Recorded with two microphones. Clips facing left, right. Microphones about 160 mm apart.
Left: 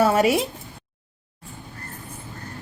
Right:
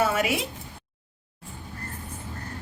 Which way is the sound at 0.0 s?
40° left (ahead or behind).